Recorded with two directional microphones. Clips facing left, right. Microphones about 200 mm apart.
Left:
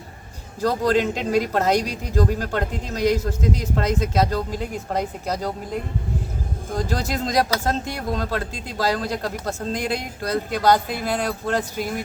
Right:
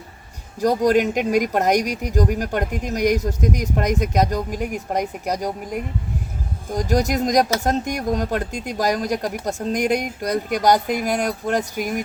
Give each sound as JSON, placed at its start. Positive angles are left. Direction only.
{"t": 0.6, "sound": "speech", "side_deg": -15}